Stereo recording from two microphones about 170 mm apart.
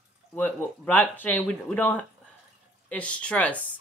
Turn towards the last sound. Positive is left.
turn(degrees=5)  # may be behind; listen again after turning